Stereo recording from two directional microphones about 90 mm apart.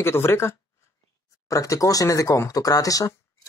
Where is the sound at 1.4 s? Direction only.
40° left (ahead or behind).